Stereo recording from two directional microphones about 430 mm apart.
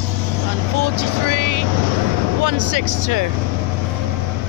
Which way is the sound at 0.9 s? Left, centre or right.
Right.